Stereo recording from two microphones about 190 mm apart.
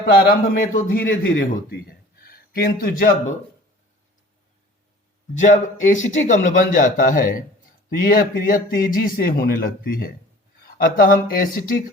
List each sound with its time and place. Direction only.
0.0 s a man's voice: 50° left (ahead or behind)
5.4 s a man's voice: 40° left (ahead or behind)